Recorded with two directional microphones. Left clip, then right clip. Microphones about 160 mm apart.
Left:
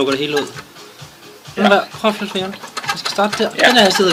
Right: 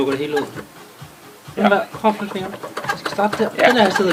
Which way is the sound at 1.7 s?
60° left (ahead or behind).